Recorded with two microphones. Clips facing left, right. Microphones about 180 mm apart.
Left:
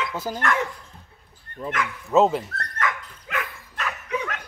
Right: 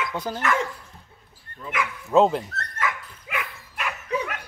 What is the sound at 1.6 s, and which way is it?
Speech, 35° left (ahead or behind).